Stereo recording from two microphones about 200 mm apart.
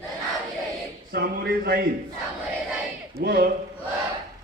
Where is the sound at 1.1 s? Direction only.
50° right (ahead or behind).